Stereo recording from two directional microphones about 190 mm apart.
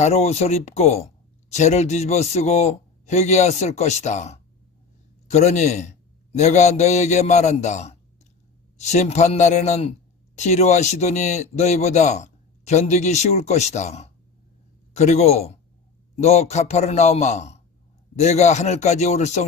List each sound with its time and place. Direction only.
0.0 s a man's voice: 35° left (ahead or behind)